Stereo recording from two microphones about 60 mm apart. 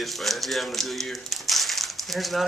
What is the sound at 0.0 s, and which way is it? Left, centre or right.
Speech, centre.